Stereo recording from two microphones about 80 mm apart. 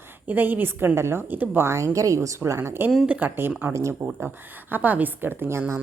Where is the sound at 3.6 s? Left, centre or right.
Right.